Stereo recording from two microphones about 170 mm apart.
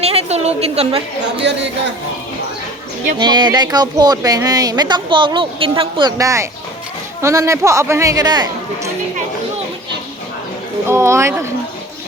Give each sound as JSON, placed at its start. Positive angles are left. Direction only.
{"t": 0.0, "sound": "a woman's voice", "side_deg": -35}
{"t": 1.4, "sound": "speech", "side_deg": -90}
{"t": 3.2, "sound": "speech", "side_deg": -25}
{"t": 10.8, "sound": "speech", "side_deg": -15}